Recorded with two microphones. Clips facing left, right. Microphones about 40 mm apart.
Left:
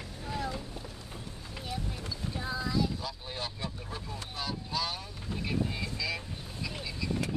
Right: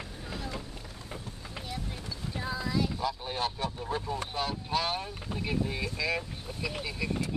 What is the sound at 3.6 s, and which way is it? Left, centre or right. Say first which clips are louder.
Speech: right 7 dB; right.